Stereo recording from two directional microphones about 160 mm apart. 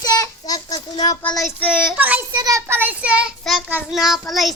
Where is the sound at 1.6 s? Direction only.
10° right (ahead or behind).